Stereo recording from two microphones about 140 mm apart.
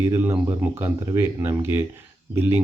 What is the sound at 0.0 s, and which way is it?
Speech, 15° right (ahead or behind).